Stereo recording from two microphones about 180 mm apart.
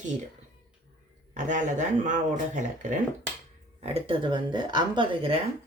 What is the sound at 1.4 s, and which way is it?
Speech, 45° right (ahead or behind).